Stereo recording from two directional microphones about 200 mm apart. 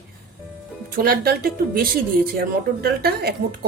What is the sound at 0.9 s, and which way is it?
Speech, 50° right (ahead or behind).